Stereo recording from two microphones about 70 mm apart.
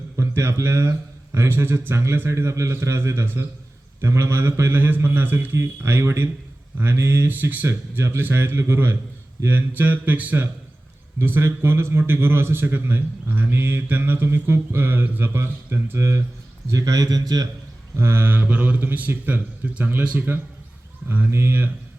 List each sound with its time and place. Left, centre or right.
0.2 s a man's voice: right
5.5 s a man's voice: right
7.3 s a man's voice: right
7.7 s a man's voice: right
11.2 s a man's voice: right
16.6 s a man's voice: right
17.9 s a man's voice: right
18.4 s a man's voice: right